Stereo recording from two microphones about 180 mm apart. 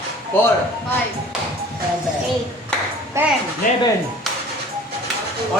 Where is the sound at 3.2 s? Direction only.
15° right (ahead or behind).